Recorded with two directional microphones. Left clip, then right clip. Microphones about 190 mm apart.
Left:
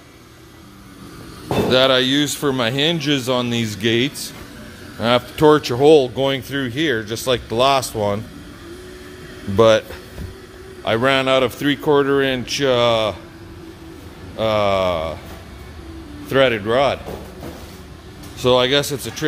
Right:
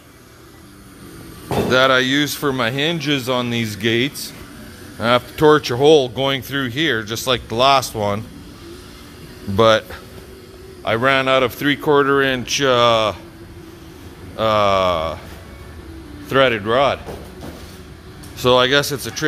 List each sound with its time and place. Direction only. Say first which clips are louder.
1.7 s speech: right 1 dB; 15° left (ahead or behind)
9.6 s speech: left 1 dB; 10° left (ahead or behind)
14.3 s speech: right 2 dB; 5° left (ahead or behind)
16.3 s speech: right 1 dB; 10° left (ahead or behind)
18.4 s speech: right 1 dB; centre (ahead or behind)